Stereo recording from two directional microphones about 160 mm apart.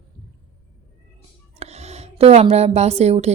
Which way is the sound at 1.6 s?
40° right (ahead or behind).